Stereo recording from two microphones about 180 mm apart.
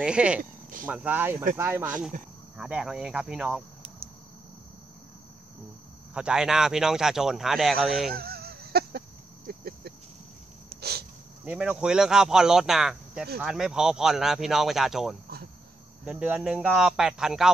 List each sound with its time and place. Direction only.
0.0 s speech: 5° right (ahead or behind)
0.4 s a sound: 50° right (ahead or behind)
0.8 s speech: 10° right (ahead or behind)
6.1 s speech: 5° right (ahead or behind)
8.1 s a sound: 55° right (ahead or behind)
11.4 s speech: 5° right (ahead or behind)